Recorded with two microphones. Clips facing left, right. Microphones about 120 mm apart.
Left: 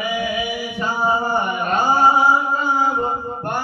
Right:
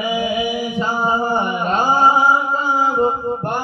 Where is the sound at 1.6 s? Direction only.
20° right (ahead or behind).